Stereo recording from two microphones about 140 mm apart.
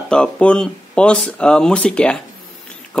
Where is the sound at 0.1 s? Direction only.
5° left (ahead or behind).